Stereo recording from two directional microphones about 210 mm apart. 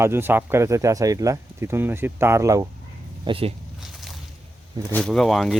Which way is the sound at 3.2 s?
25° right (ahead or behind).